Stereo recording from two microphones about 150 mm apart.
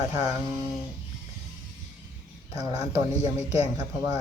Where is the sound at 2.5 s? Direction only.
25° right (ahead or behind).